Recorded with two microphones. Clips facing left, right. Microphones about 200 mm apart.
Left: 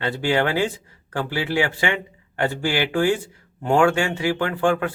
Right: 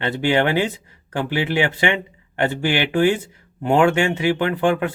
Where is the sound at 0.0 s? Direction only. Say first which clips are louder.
Right 2 dB; 20° right (ahead or behind).